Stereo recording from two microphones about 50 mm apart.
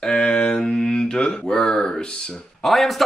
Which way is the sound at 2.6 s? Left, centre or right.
Centre.